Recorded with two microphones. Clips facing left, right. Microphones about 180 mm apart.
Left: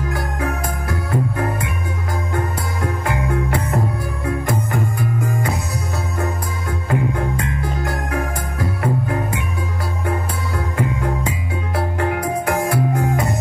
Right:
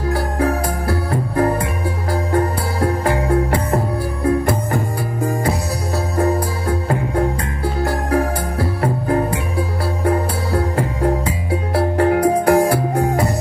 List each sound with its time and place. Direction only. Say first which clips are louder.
0.1 s music: right 8 dB; 35° right (ahead or behind)